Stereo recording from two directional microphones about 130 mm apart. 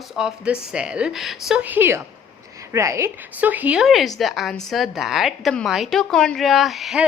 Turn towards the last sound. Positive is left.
turn(degrees=0)  # may be behind; listen again after turning